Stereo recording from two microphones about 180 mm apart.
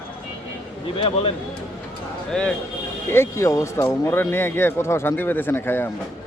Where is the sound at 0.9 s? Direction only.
30° left (ahead or behind).